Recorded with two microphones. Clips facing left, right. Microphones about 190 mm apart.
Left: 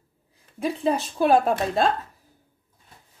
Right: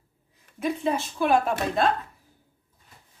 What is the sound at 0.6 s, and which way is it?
Speech, 35° left (ahead or behind).